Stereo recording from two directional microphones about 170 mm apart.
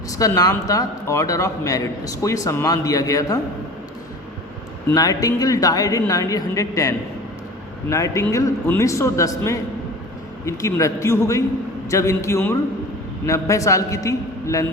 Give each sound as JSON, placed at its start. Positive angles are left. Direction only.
{"t": 0.2, "sound": "a man's voice", "side_deg": 20}
{"t": 4.9, "sound": "a man's voice", "side_deg": 20}